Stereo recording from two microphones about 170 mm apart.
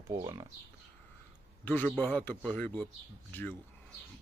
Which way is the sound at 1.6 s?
10° left (ahead or behind).